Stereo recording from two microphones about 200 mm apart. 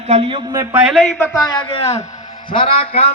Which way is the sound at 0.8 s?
Centre (ahead or behind).